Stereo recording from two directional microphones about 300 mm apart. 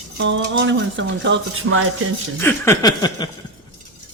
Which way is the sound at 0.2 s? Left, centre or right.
Right.